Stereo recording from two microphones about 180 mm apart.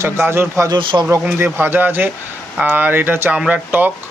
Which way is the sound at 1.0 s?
15° right (ahead or behind).